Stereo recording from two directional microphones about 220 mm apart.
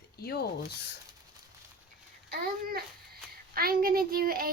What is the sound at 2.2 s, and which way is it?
Speech, 45° right (ahead or behind).